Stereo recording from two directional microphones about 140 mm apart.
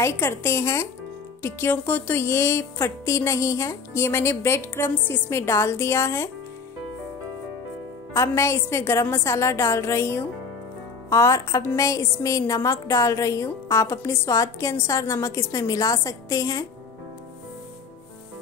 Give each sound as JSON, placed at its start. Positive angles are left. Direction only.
{"t": 0.0, "sound": "a woman's voice", "side_deg": 20}
{"t": 8.1, "sound": "a woman's voice", "side_deg": 20}